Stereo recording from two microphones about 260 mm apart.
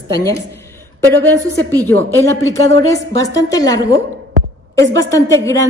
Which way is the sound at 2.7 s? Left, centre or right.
Centre.